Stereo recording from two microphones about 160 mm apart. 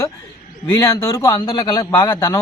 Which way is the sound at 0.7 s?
20° left (ahead or behind).